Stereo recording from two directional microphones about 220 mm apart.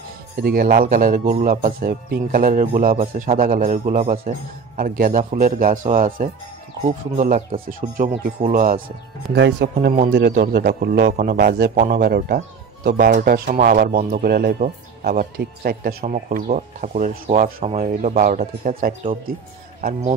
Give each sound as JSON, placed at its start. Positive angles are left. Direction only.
{"t": 0.4, "sound": "a man's voice", "side_deg": -40}